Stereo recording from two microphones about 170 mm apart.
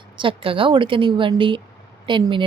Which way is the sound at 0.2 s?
30° right (ahead or behind).